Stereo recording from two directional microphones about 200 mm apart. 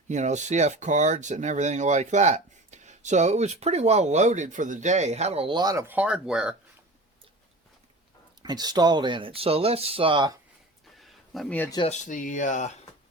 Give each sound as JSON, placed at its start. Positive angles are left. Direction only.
{"t": 0.1, "sound": "speech", "side_deg": -35}
{"t": 8.4, "sound": "speech", "side_deg": -20}
{"t": 10.9, "sound": "a sound", "side_deg": 0}
{"t": 11.9, "sound": "speech", "side_deg": 40}